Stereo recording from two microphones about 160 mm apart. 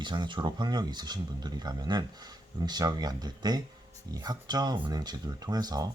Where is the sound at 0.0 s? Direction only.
30° right (ahead or behind).